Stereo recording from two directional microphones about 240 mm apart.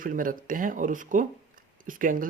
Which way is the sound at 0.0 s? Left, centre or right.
Right.